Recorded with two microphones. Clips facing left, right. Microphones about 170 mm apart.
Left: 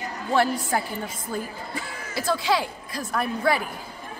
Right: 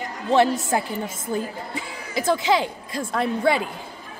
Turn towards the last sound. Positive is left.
turn(degrees=-25)  # may be behind; listen again after turning